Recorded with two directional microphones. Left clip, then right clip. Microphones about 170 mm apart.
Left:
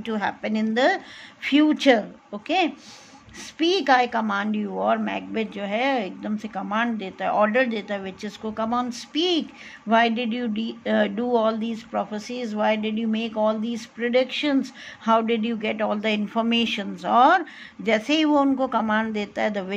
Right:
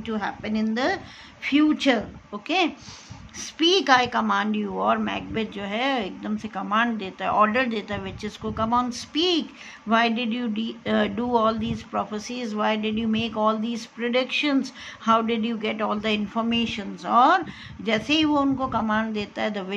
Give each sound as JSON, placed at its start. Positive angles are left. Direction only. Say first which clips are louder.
{"t": 0.0, "sound": "a woman's voice", "louder": "left 3 dB", "side_deg": 40}
{"t": 2.3, "sound": "a woman's voice", "louder": "left 1 dB", "side_deg": 20}
{"t": 16.4, "sound": "a woman's voice", "louder": "left 3 dB", "side_deg": 35}